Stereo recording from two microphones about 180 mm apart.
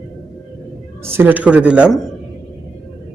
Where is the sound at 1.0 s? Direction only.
10° right (ahead or behind).